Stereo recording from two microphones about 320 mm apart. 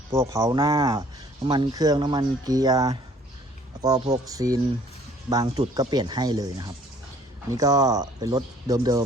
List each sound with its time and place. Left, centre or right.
0.1 s speech: centre